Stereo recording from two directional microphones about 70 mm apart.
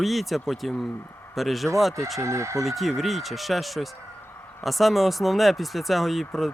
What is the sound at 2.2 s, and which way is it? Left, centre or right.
Speech, right.